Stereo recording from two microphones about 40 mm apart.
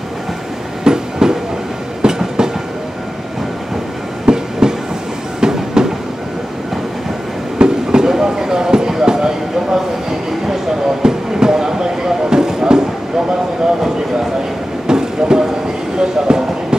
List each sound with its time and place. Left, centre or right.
0.9 s train: centre
4.3 s train: centre
7.5 s train: centre
10.4 s a sound: centre
14.9 s train: centre
16.0 s a sound: centre